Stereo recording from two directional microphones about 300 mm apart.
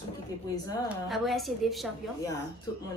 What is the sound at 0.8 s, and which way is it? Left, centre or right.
A woman's voice, centre.